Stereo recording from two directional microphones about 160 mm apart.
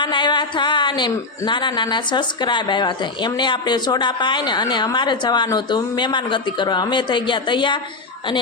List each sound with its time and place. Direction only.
0.0 s a woman's voice: 30° left (ahead or behind)